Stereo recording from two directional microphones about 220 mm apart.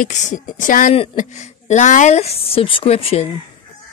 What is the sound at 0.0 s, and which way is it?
A woman's voice, 35° left (ahead or behind).